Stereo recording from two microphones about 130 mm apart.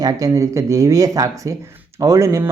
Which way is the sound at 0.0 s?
30° right (ahead or behind).